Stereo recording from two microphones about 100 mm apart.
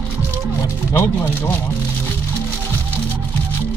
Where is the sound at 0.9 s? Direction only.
20° left (ahead or behind).